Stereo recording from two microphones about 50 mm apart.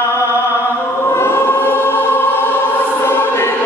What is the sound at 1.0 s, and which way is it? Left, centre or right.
Choir, left.